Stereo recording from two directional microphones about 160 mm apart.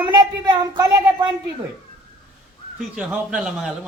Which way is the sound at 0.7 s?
25° right (ahead or behind).